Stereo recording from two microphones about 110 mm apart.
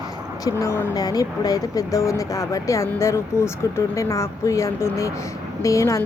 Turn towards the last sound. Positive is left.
turn(degrees=25)  # may be behind; listen again after turning